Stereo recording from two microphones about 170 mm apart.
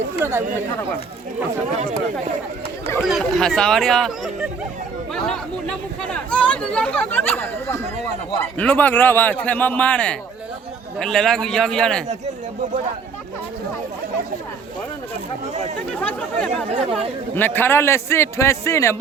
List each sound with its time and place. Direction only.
0.2 s speech: 15° right (ahead or behind)
1.7 s speech: 45° right (ahead or behind)
3.0 s speech: centre (ahead or behind)
15.9 s speech: 5° left (ahead or behind)
16.5 s speech: 40° right (ahead or behind)
17.3 s speech: 10° left (ahead or behind)